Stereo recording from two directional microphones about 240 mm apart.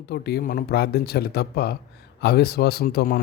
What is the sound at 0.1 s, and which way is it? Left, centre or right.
Speech, left.